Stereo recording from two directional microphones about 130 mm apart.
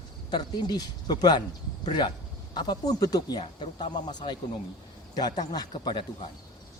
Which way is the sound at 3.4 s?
40° left (ahead or behind).